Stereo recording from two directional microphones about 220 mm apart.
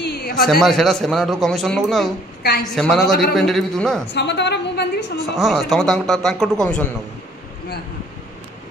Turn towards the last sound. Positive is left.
turn(degrees=5)  # may be behind; listen again after turning